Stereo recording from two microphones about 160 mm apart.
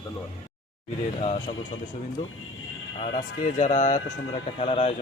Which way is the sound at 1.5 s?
50° left (ahead or behind).